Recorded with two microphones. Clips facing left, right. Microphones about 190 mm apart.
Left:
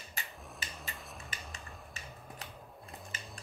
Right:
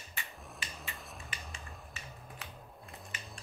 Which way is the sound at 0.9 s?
Centre (ahead or behind).